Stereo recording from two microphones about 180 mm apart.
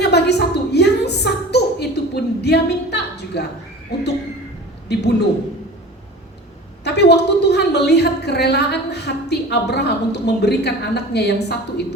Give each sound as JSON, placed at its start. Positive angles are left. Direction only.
{"t": 0.0, "sound": "a sound", "side_deg": 65}
{"t": 4.9, "sound": "a woman's voice", "side_deg": 65}
{"t": 6.8, "sound": "a woman's voice", "side_deg": 65}